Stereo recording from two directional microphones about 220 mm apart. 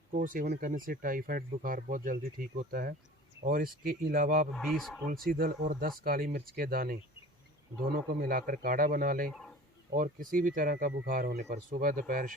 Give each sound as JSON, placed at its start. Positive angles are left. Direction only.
{"t": 0.3, "sound": "speech", "side_deg": -40}
{"t": 4.5, "sound": "speech", "side_deg": 0}
{"t": 5.0, "sound": "speech", "side_deg": -40}